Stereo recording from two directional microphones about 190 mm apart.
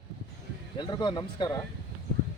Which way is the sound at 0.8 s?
25° left (ahead or behind).